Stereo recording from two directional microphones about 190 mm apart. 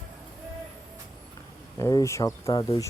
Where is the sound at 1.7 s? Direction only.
15° left (ahead or behind).